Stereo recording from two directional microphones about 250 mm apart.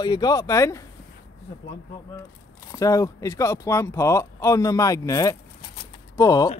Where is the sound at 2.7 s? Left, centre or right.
Centre.